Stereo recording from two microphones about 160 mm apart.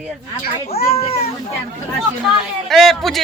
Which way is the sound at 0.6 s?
40° left (ahead or behind).